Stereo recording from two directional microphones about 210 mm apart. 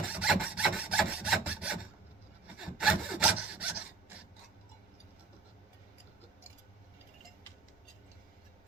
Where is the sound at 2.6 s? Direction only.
5° right (ahead or behind).